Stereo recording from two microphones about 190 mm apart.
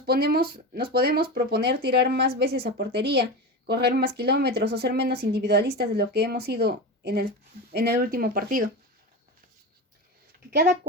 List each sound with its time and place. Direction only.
0.0 s speech: 55° right (ahead or behind)